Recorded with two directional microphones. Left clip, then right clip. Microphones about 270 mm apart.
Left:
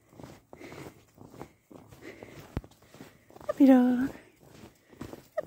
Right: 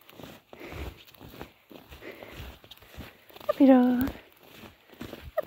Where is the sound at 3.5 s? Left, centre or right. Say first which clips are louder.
Right 2 dB; centre.